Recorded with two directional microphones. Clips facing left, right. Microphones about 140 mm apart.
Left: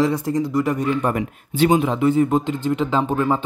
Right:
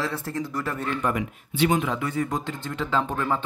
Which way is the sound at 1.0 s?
40° left (ahead or behind).